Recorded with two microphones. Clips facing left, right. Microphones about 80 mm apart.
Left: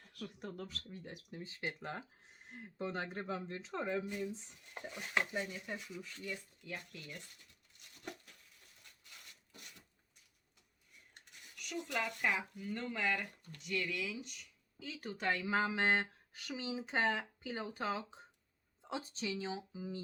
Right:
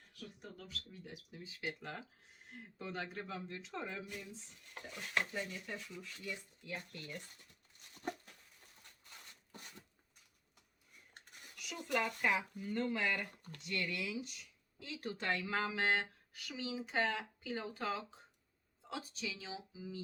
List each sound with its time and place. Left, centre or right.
0.1 s speech: left
0.6 s speech: left
1.6 s speech: left
4.7 s speech: centre
8.0 s a sound: right
11.6 s a sound: centre
11.9 s speech: centre
15.3 s speech: left